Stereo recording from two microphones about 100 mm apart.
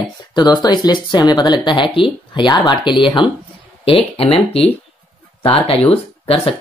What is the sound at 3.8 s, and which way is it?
Speech, 65° left (ahead or behind).